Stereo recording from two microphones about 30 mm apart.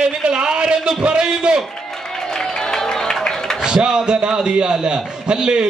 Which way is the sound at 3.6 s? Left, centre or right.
Right.